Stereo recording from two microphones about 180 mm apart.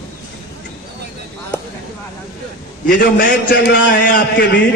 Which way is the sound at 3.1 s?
70° left (ahead or behind).